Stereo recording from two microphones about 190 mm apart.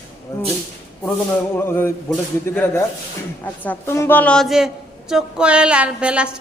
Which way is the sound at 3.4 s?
10° left (ahead or behind).